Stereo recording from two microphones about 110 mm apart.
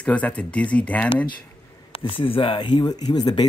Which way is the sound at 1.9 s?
50° left (ahead or behind).